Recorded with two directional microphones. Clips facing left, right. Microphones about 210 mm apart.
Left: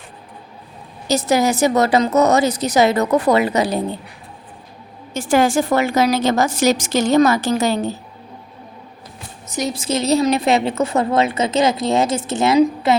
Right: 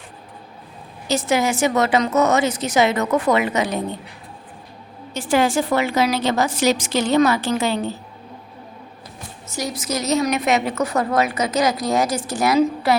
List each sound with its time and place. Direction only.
1.0 s a woman's voice: 40° left (ahead or behind)
5.1 s a woman's voice: 45° left (ahead or behind)
9.5 s a woman's voice: 20° left (ahead or behind)